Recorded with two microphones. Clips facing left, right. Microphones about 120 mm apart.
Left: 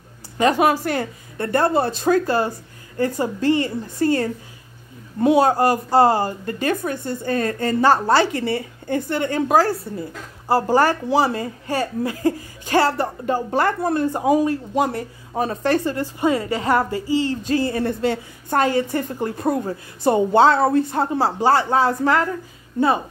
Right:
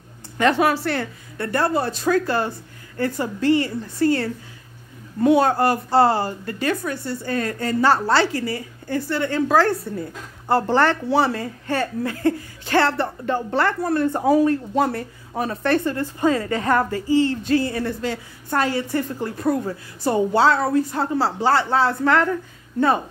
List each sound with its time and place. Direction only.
0.4 s a woman's voice: 20° left (ahead or behind)
5.2 s a woman's voice: 15° left (ahead or behind)
6.4 s a woman's voice: 45° left (ahead or behind)
7.8 s a woman's voice: 15° left (ahead or behind)
9.7 s a woman's voice: centre (ahead or behind)
13.7 s speech: 25° left (ahead or behind)
14.1 s a woman's voice: 15° left (ahead or behind)
14.9 s speech: 25° left (ahead or behind)
18.9 s a woman's voice: 15° left (ahead or behind)